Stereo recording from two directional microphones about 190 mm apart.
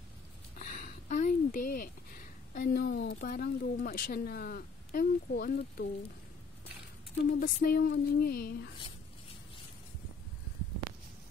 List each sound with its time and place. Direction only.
0.6 s a sound: 45° left (ahead or behind)
2.5 s speech: 55° left (ahead or behind)
7.3 s speech: 50° left (ahead or behind)